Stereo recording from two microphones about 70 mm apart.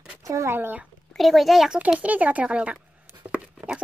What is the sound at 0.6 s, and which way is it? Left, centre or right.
Speech, right.